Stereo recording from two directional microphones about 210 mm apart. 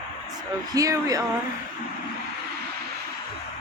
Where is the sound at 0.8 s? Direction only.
15° right (ahead or behind).